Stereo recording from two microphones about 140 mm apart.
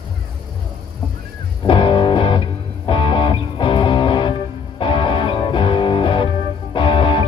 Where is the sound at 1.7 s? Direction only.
35° left (ahead or behind).